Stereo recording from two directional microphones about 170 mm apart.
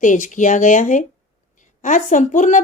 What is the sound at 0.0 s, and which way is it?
A woman's voice, 50° left (ahead or behind).